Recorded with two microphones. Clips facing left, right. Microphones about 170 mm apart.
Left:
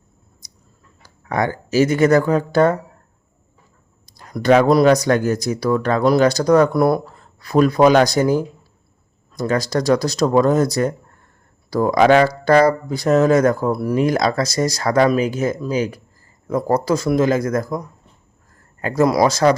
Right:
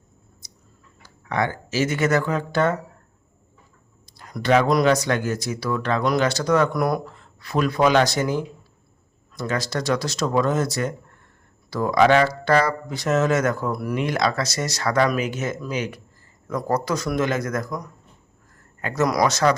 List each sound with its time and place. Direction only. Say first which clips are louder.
1.3 s speech: left 4 dB; 40° left (ahead or behind)
4.3 s a man's voice: left 5 dB; 35° left (ahead or behind)